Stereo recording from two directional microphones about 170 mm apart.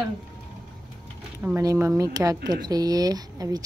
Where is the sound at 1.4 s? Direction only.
15° right (ahead or behind).